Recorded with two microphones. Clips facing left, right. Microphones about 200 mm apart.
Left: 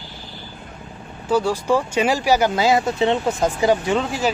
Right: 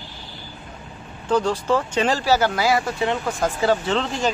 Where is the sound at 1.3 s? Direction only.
10° left (ahead or behind).